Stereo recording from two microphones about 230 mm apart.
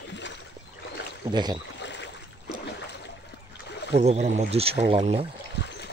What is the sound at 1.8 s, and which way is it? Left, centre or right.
Boat, left.